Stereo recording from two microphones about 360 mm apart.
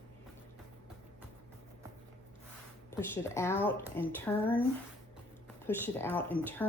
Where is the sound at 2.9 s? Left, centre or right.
Centre.